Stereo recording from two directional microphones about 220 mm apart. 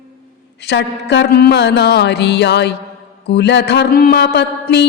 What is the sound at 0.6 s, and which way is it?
Mantra, 50° left (ahead or behind).